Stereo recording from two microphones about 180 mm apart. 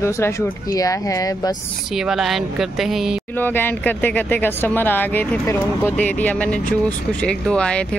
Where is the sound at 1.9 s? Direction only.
Centre (ahead or behind).